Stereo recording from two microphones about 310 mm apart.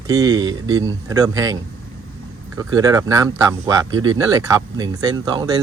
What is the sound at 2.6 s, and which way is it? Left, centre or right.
Speech, centre.